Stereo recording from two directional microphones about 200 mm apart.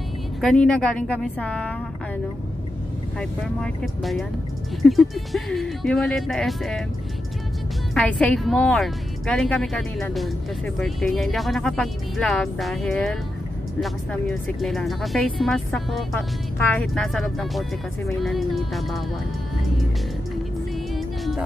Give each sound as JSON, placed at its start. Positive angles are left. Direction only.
{"t": 0.4, "sound": "speech", "side_deg": 5}
{"t": 3.2, "sound": "speech", "side_deg": 0}
{"t": 7.9, "sound": "speech", "side_deg": 5}